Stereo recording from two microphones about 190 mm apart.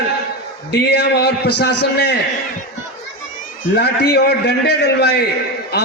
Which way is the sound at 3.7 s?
60° left (ahead or behind).